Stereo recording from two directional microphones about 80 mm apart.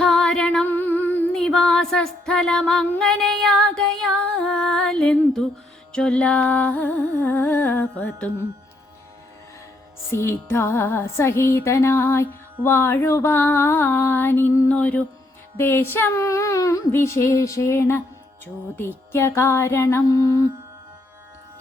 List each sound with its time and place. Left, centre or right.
0.0 s music: centre
1.3 s music: centre; by 8.3 s left
10.1 s music: left
14.7 s music: centre
15.5 s music: left
16.1 s child singing: left
16.9 s music: left
20.1 s child singing: left